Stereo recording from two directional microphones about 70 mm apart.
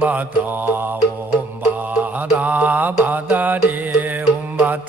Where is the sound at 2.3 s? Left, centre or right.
Right.